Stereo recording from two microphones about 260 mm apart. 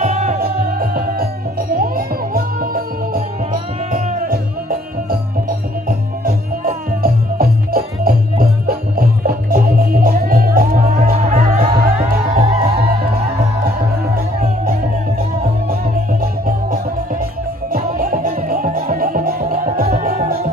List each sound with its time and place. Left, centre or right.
0.0 s music: right
14.1 s music: right